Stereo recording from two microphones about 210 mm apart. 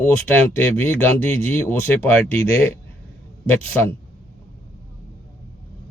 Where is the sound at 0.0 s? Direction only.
10° left (ahead or behind).